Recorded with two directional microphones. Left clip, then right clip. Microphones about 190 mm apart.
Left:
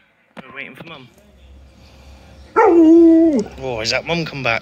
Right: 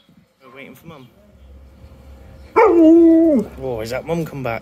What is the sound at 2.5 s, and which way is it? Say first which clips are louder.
Dog: even; 40° right (ahead or behind).